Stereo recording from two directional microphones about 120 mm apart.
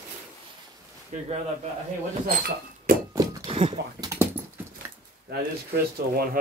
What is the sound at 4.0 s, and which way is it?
Dog, 25° right (ahead or behind).